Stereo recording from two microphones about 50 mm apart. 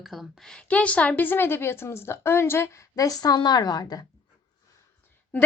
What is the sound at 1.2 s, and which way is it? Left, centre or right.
A woman's voice, left.